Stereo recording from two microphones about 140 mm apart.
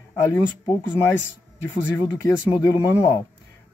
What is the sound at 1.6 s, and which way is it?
Speech, 15° left (ahead or behind).